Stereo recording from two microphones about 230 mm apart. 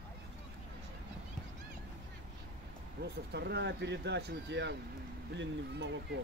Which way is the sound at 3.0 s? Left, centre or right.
Right.